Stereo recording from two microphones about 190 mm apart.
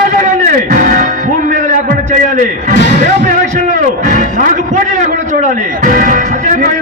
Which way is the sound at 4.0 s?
40° right (ahead or behind).